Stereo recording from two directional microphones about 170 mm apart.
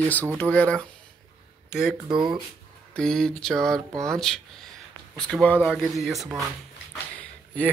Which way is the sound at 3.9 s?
20° right (ahead or behind).